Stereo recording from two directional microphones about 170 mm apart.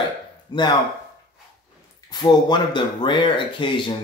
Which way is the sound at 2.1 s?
25° left (ahead or behind).